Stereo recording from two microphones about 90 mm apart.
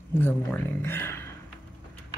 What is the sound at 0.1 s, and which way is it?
Speech, 20° left (ahead or behind).